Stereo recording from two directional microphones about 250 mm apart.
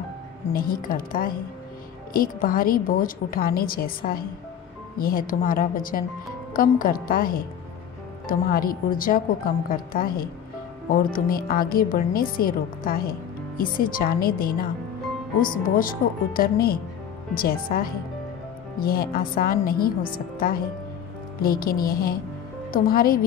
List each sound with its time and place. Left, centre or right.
0.5 s a woman's voice: left
15.8 s a woman's voice: left